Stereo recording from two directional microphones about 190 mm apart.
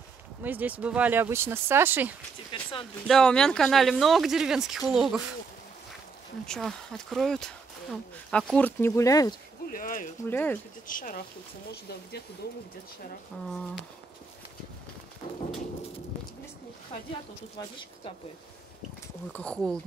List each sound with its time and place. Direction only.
0.4 s speech: 10° right (ahead or behind)
2.5 s speech: 25° left (ahead or behind)
3.1 s speech: 5° left (ahead or behind)
6.4 s speech: 5° left (ahead or behind)
9.7 s speech: 45° left (ahead or behind)
10.2 s speech: 10° left (ahead or behind)
10.9 s speech: 45° left (ahead or behind)
19.3 s speech: 5° left (ahead or behind)